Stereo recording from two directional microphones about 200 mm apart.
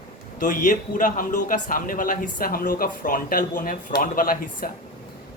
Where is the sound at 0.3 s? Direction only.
40° left (ahead or behind).